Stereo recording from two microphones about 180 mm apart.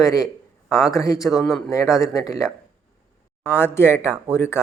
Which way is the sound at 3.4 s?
10° left (ahead or behind).